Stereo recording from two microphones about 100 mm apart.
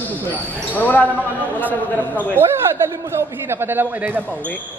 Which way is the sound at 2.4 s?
25° right (ahead or behind).